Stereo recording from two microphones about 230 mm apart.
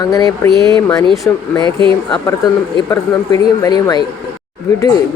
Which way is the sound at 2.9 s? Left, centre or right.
Centre.